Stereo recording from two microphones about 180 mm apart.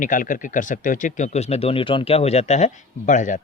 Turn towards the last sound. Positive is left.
turn(degrees=45)  # may be behind; listen again after turning